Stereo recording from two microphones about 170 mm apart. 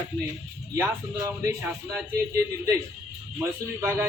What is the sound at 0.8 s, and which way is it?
Speech, 20° right (ahead or behind).